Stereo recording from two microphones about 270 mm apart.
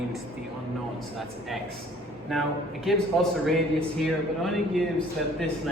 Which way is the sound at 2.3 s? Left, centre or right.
Centre.